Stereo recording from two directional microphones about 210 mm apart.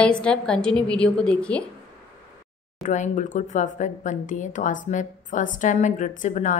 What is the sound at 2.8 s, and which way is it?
Speech, 35° left (ahead or behind).